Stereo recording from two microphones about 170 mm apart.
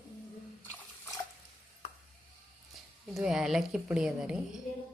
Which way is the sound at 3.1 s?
5° right (ahead or behind).